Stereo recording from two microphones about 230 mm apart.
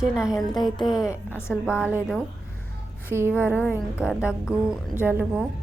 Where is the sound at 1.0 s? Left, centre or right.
Centre.